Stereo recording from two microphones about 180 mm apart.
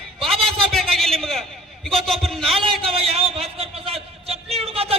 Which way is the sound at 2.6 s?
30° right (ahead or behind).